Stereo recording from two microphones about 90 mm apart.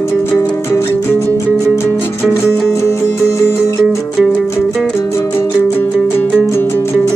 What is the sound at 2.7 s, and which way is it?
Music, 30° left (ahead or behind).